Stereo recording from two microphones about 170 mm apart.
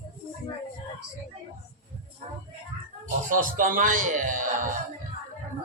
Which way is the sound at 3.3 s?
55° right (ahead or behind).